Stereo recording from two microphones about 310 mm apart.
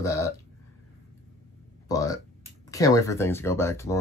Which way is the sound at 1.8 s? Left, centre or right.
Centre.